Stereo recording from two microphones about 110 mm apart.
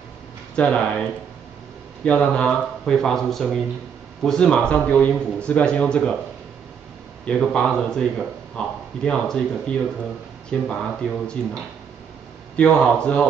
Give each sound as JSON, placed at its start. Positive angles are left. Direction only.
{"t": 0.6, "sound": "speech", "side_deg": 10}
{"t": 2.0, "sound": "a man's voice", "side_deg": 10}
{"t": 7.2, "sound": "a man's voice", "side_deg": 5}
{"t": 12.5, "sound": "speech", "side_deg": 10}